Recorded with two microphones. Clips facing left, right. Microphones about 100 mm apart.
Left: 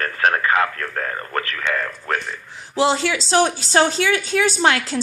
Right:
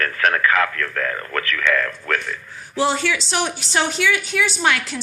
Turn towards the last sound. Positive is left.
turn(degrees=30)  # may be behind; listen again after turning